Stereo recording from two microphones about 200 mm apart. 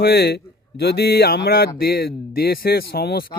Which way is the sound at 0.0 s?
55° left (ahead or behind).